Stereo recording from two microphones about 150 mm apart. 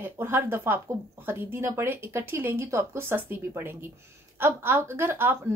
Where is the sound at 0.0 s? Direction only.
15° right (ahead or behind).